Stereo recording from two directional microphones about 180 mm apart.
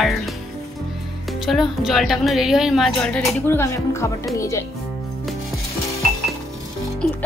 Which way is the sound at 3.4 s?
15° left (ahead or behind).